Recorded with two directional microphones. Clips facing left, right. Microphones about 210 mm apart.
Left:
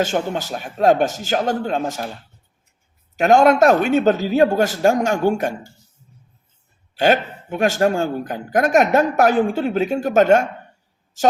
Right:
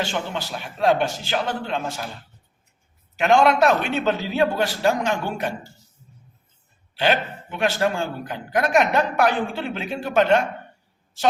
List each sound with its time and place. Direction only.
0.0 s speech: 45° left (ahead or behind)
3.2 s speech: 45° left (ahead or behind)
6.9 s a woman's voice: 45° left (ahead or behind)